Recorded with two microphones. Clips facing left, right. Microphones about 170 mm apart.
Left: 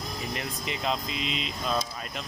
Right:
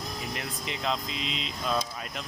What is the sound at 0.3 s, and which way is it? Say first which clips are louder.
Speech: left 2 dB; centre (ahead or behind).